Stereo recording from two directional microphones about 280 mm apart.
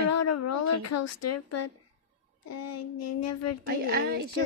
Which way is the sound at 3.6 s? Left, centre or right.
Right.